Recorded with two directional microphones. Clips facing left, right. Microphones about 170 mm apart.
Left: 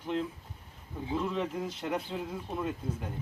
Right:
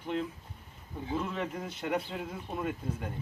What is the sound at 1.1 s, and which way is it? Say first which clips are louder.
Speech: left 2 dB; 5° right (ahead or behind).